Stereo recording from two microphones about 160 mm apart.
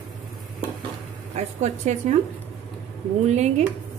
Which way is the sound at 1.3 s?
45° right (ahead or behind).